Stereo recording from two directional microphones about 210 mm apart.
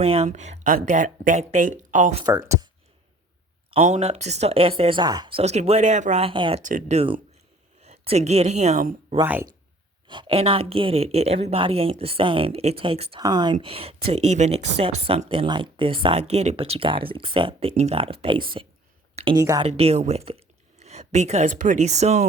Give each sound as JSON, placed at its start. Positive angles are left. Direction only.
{"t": 0.0, "sound": "speech", "side_deg": -30}
{"t": 2.2, "sound": "speech", "side_deg": -15}
{"t": 3.8, "sound": "a woman's voice", "side_deg": -35}
{"t": 5.4, "sound": "a woman's voice", "side_deg": -30}
{"t": 9.2, "sound": "speech", "side_deg": -10}
{"t": 10.1, "sound": "a woman's voice", "side_deg": -25}
{"t": 19.6, "sound": "a woman's voice", "side_deg": -30}